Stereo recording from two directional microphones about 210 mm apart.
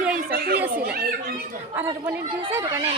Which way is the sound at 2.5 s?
15° right (ahead or behind).